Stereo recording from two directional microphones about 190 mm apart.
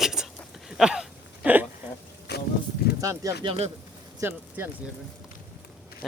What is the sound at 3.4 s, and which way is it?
Speech, 30° right (ahead or behind).